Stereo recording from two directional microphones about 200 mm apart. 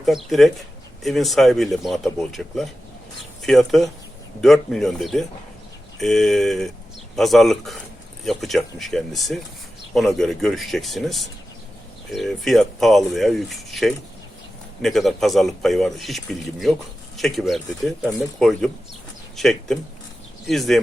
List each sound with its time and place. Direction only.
0.0 s speech: centre (ahead or behind)